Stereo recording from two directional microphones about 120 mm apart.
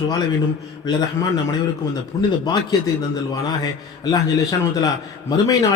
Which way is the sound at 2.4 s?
40° left (ahead or behind).